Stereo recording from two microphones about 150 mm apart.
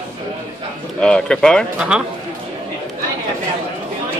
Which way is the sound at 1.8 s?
5° right (ahead or behind).